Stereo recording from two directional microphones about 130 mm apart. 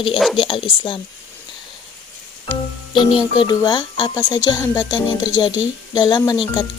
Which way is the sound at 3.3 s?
35° left (ahead or behind).